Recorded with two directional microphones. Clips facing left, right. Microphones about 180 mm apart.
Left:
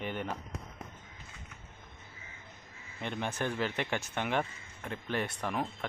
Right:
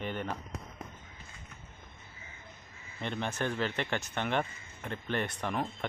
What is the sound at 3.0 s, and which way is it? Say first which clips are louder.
Speech: right 1 dB; 10° left (ahead or behind).